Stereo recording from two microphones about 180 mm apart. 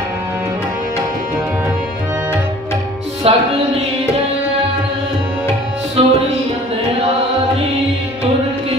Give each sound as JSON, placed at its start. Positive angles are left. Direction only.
{"t": 3.3, "sound": "speech", "side_deg": -30}
{"t": 6.0, "sound": "music", "side_deg": -35}